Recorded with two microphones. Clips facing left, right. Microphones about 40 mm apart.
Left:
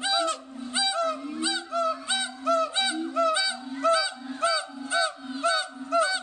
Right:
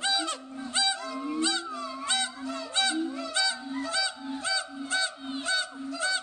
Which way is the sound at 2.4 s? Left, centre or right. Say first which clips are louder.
Left 11 dB; left.